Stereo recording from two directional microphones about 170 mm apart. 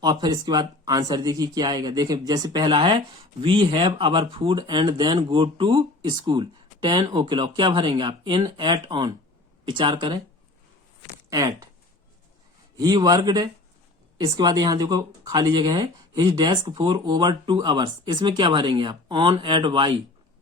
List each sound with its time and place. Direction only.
0.0 s speech: 25° right (ahead or behind)
11.3 s speech: 20° right (ahead or behind)
12.7 s speech: 20° right (ahead or behind)